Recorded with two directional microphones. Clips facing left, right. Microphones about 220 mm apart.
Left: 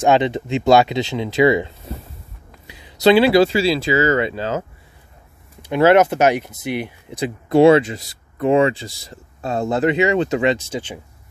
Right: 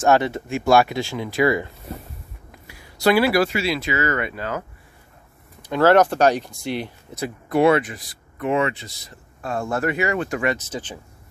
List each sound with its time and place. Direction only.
0.0 s speech: 15° left (ahead or behind)